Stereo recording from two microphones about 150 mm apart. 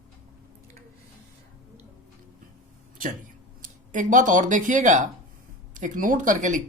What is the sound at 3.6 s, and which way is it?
A woman's voice, 60° right (ahead or behind).